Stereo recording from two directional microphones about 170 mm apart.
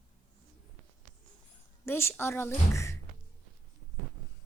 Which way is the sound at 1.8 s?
15° left (ahead or behind).